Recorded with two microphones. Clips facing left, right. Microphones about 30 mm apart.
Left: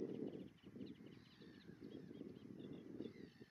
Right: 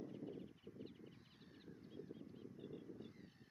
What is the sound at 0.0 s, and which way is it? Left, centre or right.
Crow, centre.